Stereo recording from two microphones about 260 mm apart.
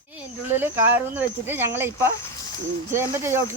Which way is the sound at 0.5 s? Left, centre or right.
Centre.